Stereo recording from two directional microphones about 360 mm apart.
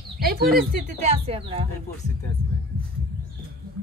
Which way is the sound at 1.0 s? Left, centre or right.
Centre.